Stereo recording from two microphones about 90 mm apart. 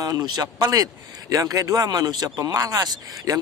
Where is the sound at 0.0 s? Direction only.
50° right (ahead or behind).